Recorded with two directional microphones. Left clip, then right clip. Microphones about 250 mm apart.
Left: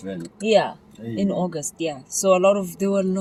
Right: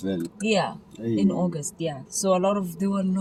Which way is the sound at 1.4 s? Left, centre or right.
Left.